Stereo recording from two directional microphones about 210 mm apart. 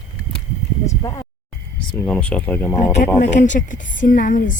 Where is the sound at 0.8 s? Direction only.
15° left (ahead or behind).